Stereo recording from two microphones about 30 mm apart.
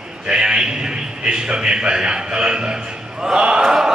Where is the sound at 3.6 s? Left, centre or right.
Centre.